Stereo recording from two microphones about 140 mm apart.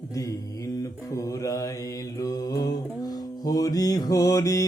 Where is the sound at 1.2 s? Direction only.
25° left (ahead or behind).